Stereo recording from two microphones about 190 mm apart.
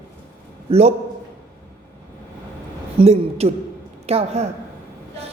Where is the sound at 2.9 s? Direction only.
35° right (ahead or behind).